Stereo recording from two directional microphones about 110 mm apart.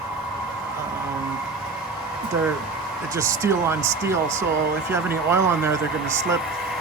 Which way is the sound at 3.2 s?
25° right (ahead or behind).